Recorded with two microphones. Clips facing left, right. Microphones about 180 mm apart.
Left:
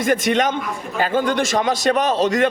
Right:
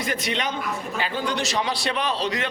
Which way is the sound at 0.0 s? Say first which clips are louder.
Left 9 dB; 50° left (ahead or behind).